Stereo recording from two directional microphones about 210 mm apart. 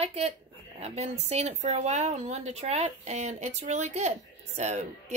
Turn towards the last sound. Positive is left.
turn(degrees=-35)  # may be behind; listen again after turning